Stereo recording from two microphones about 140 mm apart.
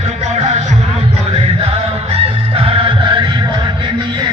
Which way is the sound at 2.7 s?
35° right (ahead or behind).